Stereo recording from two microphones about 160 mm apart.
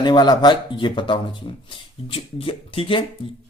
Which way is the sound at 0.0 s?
25° left (ahead or behind).